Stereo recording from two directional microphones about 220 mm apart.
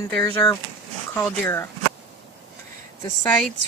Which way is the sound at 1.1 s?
10° left (ahead or behind).